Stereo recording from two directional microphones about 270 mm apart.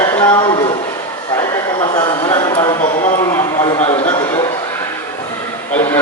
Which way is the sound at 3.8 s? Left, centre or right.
Left.